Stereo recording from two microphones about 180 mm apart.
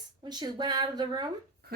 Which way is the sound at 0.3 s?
25° right (ahead or behind).